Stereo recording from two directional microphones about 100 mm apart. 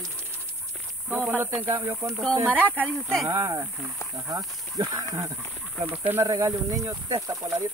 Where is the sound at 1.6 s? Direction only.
25° right (ahead or behind).